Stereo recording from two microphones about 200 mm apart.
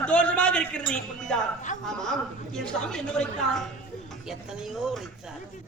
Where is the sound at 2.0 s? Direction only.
Centre (ahead or behind).